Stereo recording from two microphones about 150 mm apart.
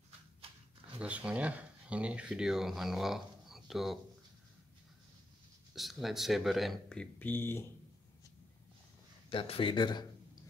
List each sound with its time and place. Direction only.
0.9 s speech: 10° right (ahead or behind)
5.7 s speech: centre (ahead or behind); by 7.6 s 15° left (ahead or behind)
9.3 s speech: 35° left (ahead or behind)